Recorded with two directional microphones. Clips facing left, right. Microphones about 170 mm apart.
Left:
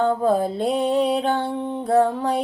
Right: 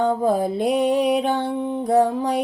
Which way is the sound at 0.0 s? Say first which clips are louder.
Even; 15° right (ahead or behind).